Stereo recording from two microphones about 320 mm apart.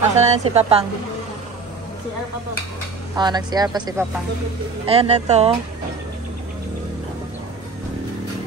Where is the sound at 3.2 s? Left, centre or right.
Centre.